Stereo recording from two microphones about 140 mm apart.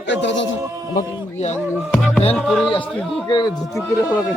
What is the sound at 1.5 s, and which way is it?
Music, 10° left (ahead or behind).